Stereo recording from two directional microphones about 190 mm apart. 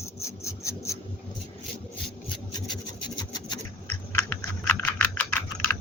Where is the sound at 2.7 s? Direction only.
20° left (ahead or behind).